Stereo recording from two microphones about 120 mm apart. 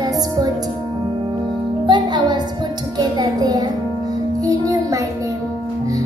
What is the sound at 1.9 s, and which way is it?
Music, 40° right (ahead or behind).